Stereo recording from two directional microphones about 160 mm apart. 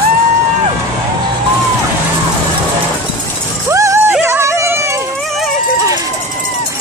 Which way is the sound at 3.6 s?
20° right (ahead or behind).